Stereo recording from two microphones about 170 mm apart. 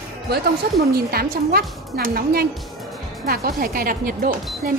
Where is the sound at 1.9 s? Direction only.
75° right (ahead or behind).